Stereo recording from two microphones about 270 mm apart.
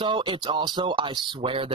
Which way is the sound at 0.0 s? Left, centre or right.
Centre.